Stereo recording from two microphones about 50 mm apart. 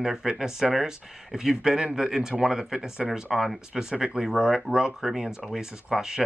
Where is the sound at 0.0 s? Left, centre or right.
Centre.